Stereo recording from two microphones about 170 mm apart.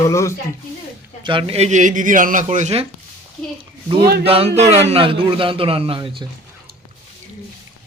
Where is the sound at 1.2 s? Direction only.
30° right (ahead or behind).